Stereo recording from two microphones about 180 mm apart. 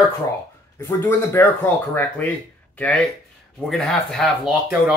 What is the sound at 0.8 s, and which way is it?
Speech, 10° left (ahead or behind).